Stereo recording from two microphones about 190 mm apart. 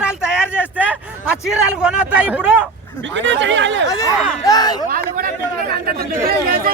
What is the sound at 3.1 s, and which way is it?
Chatter, 75° right (ahead or behind).